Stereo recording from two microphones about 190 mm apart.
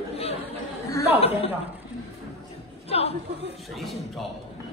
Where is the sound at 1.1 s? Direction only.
30° left (ahead or behind).